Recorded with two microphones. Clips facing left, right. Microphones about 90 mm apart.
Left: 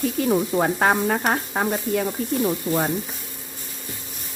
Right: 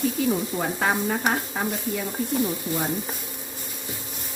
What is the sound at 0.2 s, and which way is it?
Stir, 55° left (ahead or behind).